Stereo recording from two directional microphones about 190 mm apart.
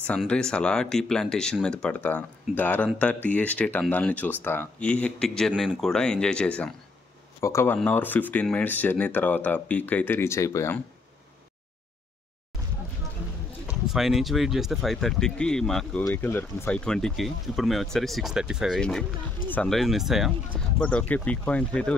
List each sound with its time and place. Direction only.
0.0 s speech: 5° left (ahead or behind)
13.7 s speech: centre (ahead or behind)